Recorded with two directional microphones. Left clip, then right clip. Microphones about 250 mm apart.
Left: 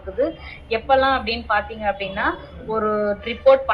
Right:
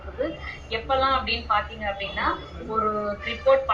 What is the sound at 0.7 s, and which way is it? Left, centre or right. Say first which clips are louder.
A woman's voice: left 5 dB; left.